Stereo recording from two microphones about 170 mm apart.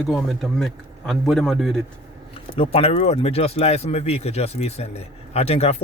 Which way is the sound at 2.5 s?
35° left (ahead or behind).